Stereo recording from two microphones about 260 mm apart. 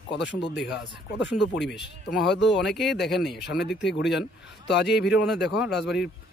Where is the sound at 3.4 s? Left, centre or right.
Left.